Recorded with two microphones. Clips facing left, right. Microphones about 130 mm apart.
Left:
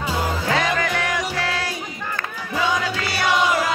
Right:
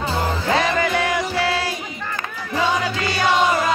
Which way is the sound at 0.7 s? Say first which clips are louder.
Right 3 dB; 15° right (ahead or behind).